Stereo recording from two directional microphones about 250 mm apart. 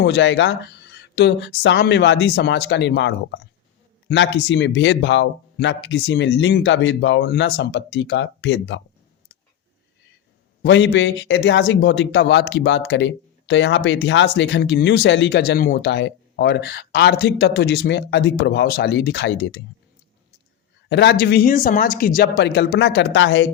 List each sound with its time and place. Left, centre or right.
0.0 s a man's voice: left
10.6 s a man's voice: left
20.9 s speech: left